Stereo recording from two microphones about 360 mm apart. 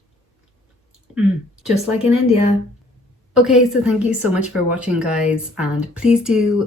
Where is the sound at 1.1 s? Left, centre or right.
Centre.